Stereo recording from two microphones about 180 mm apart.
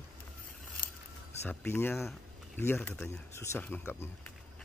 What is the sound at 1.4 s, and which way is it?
Speech, 10° left (ahead or behind).